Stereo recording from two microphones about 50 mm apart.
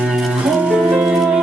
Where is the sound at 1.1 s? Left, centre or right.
Centre.